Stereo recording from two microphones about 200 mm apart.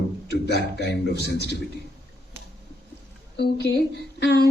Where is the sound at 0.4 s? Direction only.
60° left (ahead or behind).